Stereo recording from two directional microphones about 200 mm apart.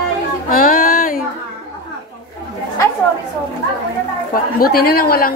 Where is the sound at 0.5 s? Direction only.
45° left (ahead or behind).